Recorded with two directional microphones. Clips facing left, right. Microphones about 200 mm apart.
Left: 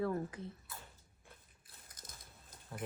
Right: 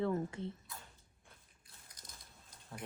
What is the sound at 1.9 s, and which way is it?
Biting, 50° left (ahead or behind).